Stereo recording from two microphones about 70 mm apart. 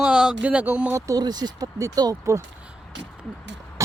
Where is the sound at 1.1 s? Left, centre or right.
Right.